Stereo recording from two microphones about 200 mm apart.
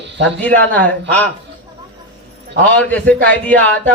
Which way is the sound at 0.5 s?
10° left (ahead or behind).